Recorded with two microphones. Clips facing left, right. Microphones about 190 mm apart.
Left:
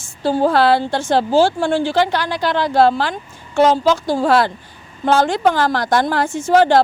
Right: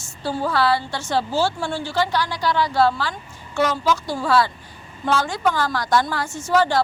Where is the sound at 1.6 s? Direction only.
90° left.